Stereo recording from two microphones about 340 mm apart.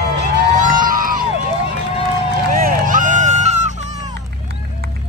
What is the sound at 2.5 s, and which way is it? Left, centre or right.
Run, right.